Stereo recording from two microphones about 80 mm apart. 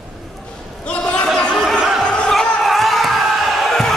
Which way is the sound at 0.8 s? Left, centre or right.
Centre.